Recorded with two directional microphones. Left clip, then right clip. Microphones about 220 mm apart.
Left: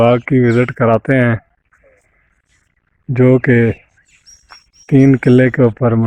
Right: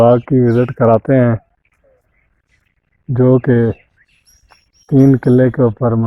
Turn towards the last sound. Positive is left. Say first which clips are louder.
# left 1 dB
turn(degrees=25)  # may be behind; listen again after turning